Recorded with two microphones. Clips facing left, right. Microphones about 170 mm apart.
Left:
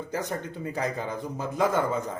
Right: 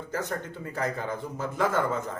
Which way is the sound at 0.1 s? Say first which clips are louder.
Right 1 dB; 15° left (ahead or behind).